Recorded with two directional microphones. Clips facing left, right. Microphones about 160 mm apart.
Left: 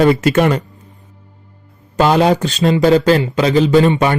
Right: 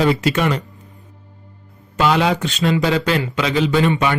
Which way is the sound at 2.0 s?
40° left (ahead or behind).